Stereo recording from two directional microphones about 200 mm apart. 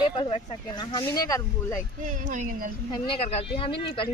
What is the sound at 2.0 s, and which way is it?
Speech, 40° right (ahead or behind).